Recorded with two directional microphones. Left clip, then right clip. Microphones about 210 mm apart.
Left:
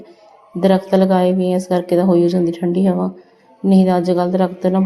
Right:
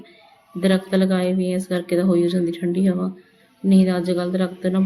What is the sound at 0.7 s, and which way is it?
Speech, 15° left (ahead or behind).